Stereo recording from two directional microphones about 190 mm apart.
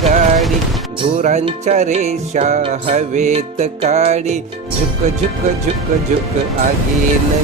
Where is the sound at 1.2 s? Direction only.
40° right (ahead or behind).